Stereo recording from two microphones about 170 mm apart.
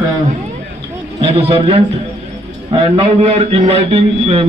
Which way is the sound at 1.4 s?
35° right (ahead or behind).